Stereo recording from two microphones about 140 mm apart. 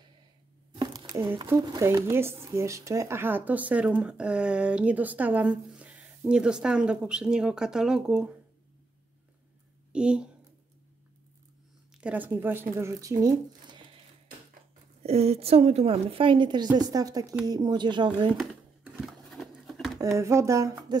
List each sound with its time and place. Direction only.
0.7 s a sound: 30° right (ahead or behind)
1.4 s speech: 30° right (ahead or behind); by 8.3 s 5° right (ahead or behind)
9.9 s speech: 5° right (ahead or behind)
12.0 s speech: 10° right (ahead or behind); by 13.8 s 30° right (ahead or behind)
15.0 s a woman's voice: 45° right (ahead or behind)
18.4 s a sound: centre (ahead or behind)
20.0 s speech: 20° right (ahead or behind)